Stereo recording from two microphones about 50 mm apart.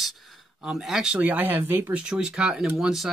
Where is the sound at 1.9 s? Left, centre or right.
Centre.